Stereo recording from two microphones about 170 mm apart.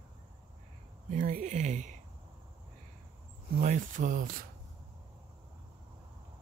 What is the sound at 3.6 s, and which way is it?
Speech, 50° right (ahead or behind).